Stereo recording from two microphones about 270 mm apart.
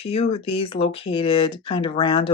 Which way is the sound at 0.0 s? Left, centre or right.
Left.